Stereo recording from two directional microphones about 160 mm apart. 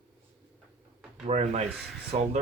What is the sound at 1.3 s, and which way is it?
Speech, 45° right (ahead or behind).